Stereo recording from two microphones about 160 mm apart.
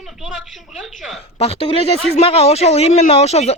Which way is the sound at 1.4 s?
40° left (ahead or behind).